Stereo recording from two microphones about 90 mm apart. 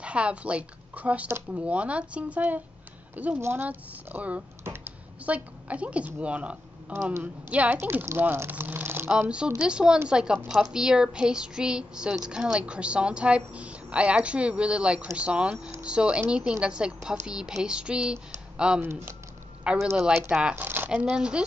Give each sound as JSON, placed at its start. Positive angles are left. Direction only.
{"t": 0.0, "sound": "a woman's voice", "side_deg": -15}
{"t": 9.6, "sound": "a woman's voice", "side_deg": -10}
{"t": 18.8, "sound": "speech", "side_deg": -25}
{"t": 19.6, "sound": "a woman's voice", "side_deg": -10}
{"t": 20.9, "sound": "a woman's voice", "side_deg": -10}